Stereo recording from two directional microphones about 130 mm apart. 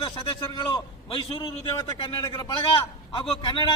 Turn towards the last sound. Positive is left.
turn(degrees=40)  # may be behind; listen again after turning